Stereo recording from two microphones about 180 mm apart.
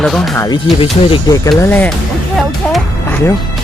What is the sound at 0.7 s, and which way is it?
Speech, 30° left (ahead or behind).